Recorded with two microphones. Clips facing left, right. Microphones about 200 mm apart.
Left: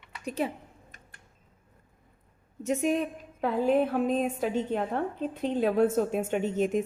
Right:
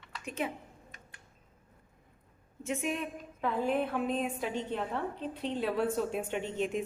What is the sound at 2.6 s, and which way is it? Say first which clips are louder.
A woman's voice: left 7 dB; 40° left (ahead or behind).